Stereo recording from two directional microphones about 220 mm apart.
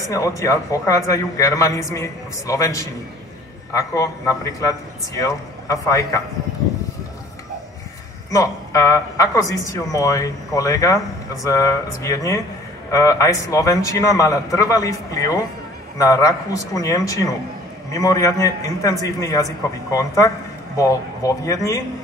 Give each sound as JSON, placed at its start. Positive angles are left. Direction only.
{"t": 0.1, "sound": "a man's voice", "side_deg": 15}
{"t": 8.3, "sound": "a man's voice", "side_deg": 15}